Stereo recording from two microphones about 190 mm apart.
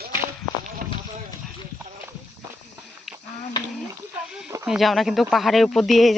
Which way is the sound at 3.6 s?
25° left (ahead or behind).